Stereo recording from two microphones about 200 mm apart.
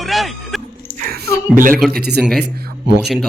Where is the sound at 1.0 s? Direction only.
45° right (ahead or behind); by 3.0 s 60° right (ahead or behind).